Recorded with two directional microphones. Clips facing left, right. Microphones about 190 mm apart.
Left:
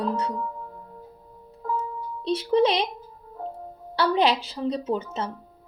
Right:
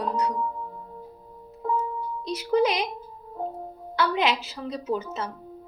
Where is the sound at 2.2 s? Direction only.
30° left (ahead or behind).